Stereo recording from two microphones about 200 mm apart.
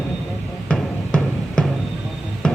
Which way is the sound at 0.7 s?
5° left (ahead or behind).